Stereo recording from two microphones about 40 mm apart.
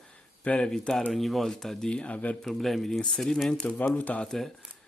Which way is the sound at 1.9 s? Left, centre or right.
Left.